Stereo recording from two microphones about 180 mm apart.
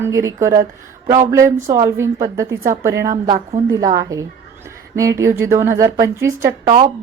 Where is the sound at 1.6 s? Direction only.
15° right (ahead or behind).